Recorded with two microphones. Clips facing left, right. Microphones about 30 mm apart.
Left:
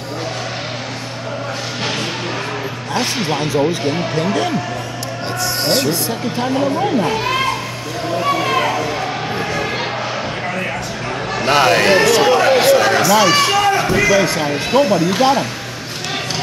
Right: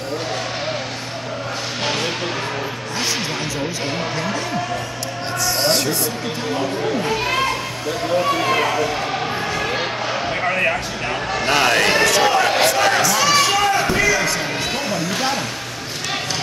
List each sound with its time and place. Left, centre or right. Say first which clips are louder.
4.2 s speech: left 6 dB; left
5.6 s speech: left 2 dB; centre
6.6 s speech: left 5 dB; left
7.1 s a child's voice: left 2 dB; centre
9.4 s a sound: left 1 dB; centre
11.3 s speech: left 4 dB; centre
12.2 s a sound: left 3 dB; centre
13.2 s speech: left 3 dB; centre